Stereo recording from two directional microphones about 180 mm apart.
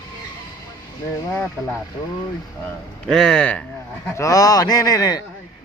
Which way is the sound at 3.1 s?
Centre (ahead or behind).